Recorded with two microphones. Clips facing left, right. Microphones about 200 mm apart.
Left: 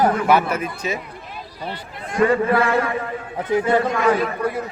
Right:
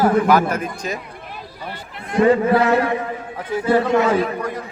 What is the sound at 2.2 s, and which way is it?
Speech, 20° right (ahead or behind).